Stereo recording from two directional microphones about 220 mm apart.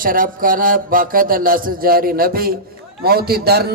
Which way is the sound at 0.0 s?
40° right (ahead or behind).